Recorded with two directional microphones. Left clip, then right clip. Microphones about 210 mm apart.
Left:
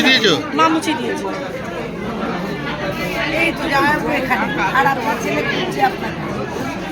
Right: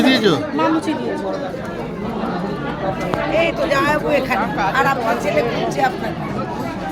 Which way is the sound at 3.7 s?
45° right (ahead or behind).